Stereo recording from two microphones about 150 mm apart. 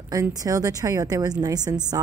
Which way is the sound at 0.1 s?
25° right (ahead or behind).